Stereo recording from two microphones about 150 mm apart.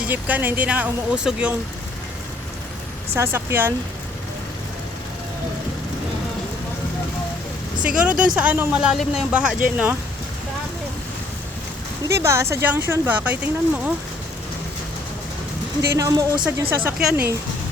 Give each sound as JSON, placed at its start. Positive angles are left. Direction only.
{"t": 0.0, "sound": "speech", "side_deg": -10}
{"t": 3.2, "sound": "speech", "side_deg": -15}
{"t": 7.8, "sound": "speech", "side_deg": -5}
{"t": 12.0, "sound": "speech", "side_deg": -20}
{"t": 15.9, "sound": "a woman's voice", "side_deg": -25}
{"t": 16.6, "sound": "speech", "side_deg": -5}